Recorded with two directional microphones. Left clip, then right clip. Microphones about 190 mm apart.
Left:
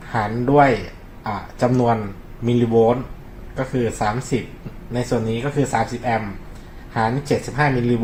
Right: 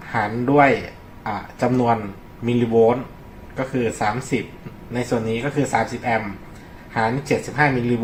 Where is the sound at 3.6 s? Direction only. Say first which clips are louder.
Even; 35° left (ahead or behind).